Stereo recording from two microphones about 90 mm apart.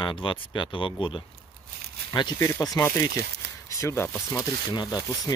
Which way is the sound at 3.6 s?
35° left (ahead or behind).